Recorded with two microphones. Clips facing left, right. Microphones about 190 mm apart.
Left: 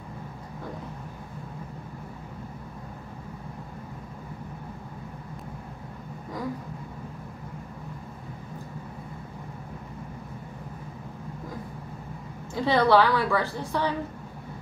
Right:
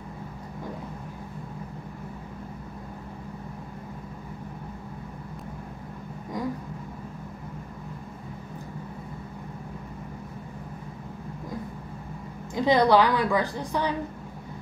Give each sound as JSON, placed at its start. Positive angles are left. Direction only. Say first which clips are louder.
{"t": 12.5, "sound": "a woman's voice", "louder": "right 1 dB", "side_deg": -15}